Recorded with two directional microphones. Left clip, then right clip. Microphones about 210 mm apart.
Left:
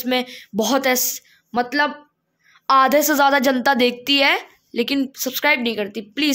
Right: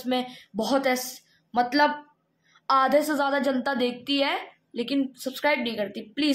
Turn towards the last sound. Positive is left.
turn(degrees=45)  # may be behind; listen again after turning